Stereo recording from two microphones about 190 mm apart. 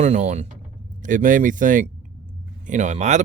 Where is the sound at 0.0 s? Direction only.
35° right (ahead or behind).